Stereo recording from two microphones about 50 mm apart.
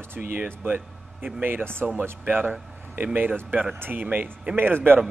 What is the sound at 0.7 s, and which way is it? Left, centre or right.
Speech, right.